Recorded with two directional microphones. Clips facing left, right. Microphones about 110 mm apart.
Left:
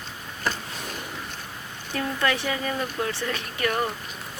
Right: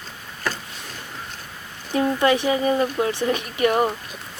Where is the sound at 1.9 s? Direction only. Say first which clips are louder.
Right 7 dB; 20° right (ahead or behind).